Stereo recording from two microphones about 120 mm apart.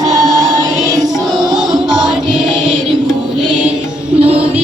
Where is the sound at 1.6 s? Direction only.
5° right (ahead or behind).